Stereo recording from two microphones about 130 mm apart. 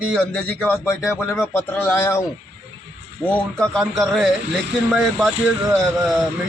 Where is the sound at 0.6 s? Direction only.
15° left (ahead or behind).